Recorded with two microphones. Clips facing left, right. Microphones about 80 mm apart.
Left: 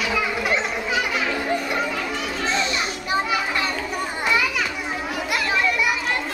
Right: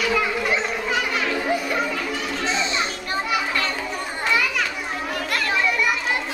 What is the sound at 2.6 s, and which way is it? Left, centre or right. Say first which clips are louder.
Children playing: left 1 dB; right.